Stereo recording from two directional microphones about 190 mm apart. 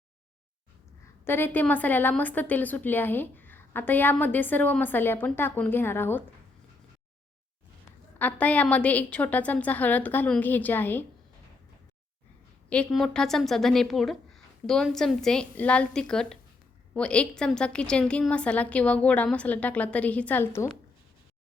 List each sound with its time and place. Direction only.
1.2 s a woman's voice: 10° left (ahead or behind)
8.2 s a woman's voice: 5° left (ahead or behind)
12.7 s a woman's voice: 5° left (ahead or behind)